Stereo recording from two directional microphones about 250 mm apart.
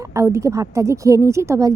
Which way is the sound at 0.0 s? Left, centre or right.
Centre.